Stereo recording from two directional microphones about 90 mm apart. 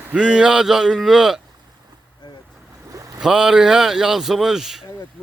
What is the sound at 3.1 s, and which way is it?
A man's voice, 5° right (ahead or behind).